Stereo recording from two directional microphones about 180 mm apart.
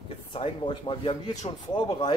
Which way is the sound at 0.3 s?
30° left (ahead or behind).